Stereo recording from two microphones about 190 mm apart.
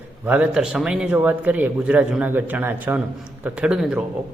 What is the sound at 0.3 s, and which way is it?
A man's voice, 5° right (ahead or behind).